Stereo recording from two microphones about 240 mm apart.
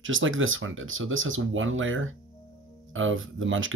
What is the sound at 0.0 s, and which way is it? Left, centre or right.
Speech, right.